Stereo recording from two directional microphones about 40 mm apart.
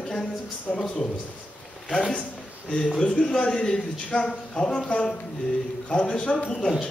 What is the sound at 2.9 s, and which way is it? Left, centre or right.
Speech, left.